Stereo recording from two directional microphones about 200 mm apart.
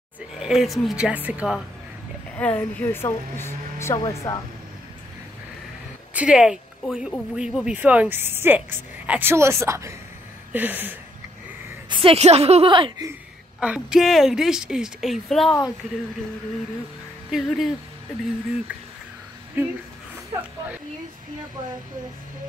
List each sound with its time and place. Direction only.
0.4 s speech: centre (ahead or behind)
2.3 s speech: 10° left (ahead or behind)
6.1 s speech: 5° right (ahead or behind)
11.9 s a woman's voice: 30° right (ahead or behind)
13.6 s speech: 5° right (ahead or behind)
17.3 s speech: centre (ahead or behind)
19.6 s speech: 10° right (ahead or behind)